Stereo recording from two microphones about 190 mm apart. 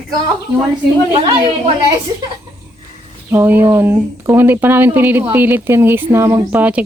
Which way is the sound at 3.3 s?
10° right (ahead or behind).